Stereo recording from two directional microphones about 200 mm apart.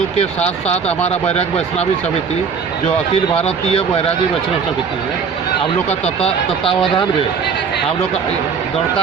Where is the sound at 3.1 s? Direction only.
30° left (ahead or behind).